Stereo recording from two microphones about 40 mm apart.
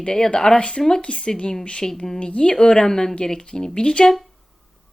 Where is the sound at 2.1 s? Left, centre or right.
Left.